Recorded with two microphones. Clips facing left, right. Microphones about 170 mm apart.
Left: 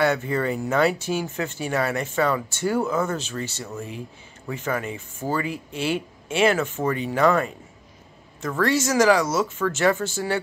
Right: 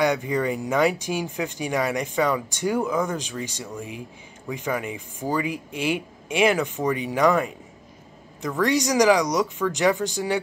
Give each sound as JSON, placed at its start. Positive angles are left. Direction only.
{"t": 0.0, "sound": "speech", "side_deg": -15}
{"t": 8.5, "sound": "speech", "side_deg": -15}